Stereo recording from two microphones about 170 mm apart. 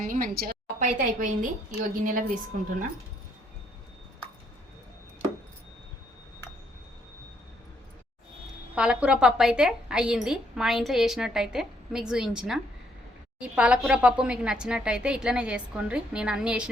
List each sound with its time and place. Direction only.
0.0 s a woman's voice: 55° right (ahead or behind)
8.7 s a woman's voice: 5° right (ahead or behind)